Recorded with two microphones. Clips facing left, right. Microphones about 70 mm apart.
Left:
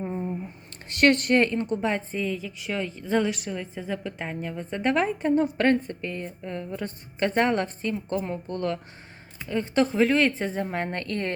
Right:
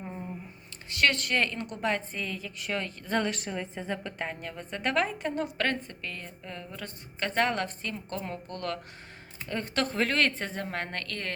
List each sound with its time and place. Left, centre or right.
0.0 s a sound: centre
0.9 s a woman's voice: left; by 4.1 s centre
4.2 s a woman's voice: centre